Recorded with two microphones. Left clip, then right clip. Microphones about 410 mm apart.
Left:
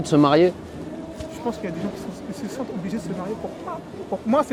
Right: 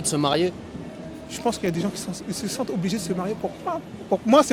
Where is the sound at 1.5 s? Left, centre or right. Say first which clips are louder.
Right 4 dB; right.